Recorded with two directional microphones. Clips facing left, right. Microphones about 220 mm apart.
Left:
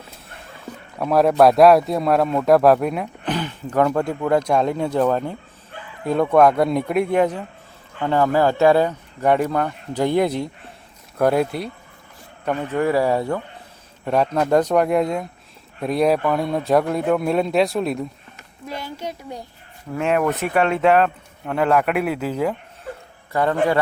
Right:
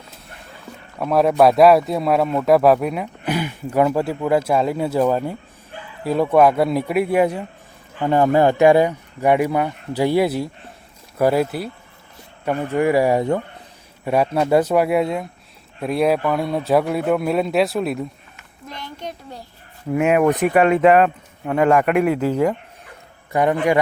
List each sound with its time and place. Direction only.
0.9 s speech: centre (ahead or behind)
18.7 s a sound: 10° left (ahead or behind)
19.9 s speech: 10° right (ahead or behind)
22.1 s speech: 10° right (ahead or behind)